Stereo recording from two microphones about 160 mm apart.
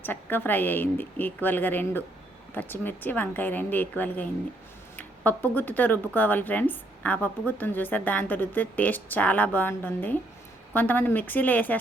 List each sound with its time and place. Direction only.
0.0 s speech: 10° left (ahead or behind)